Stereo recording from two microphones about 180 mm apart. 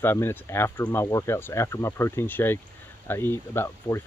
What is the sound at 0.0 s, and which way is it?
Speech, 10° left (ahead or behind).